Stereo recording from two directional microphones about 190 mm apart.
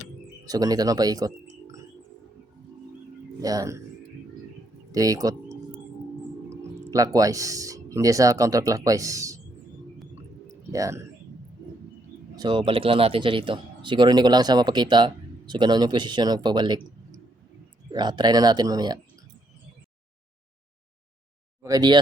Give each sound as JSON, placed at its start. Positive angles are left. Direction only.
{"t": 0.4, "sound": "speech", "side_deg": -20}
{"t": 3.4, "sound": "speech", "side_deg": -20}
{"t": 4.9, "sound": "speech", "side_deg": -20}
{"t": 6.5, "sound": "a sound", "side_deg": -15}
{"t": 6.9, "sound": "a man's voice", "side_deg": -20}
{"t": 10.7, "sound": "a man's voice", "side_deg": -15}
{"t": 12.4, "sound": "speech", "side_deg": -25}
{"t": 21.6, "sound": "speech", "side_deg": -20}